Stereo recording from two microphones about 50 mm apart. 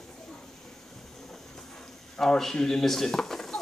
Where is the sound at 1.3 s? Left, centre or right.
Centre.